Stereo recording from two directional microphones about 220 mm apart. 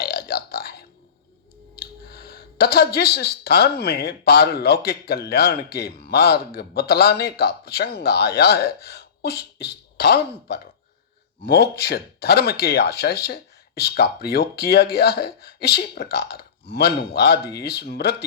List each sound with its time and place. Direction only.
0.0 s burping: 45° left (ahead or behind)
1.7 s speech: 45° left (ahead or behind)